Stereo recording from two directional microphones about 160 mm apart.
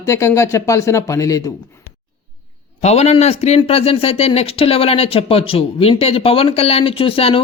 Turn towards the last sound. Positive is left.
turn(degrees=35)  # may be behind; listen again after turning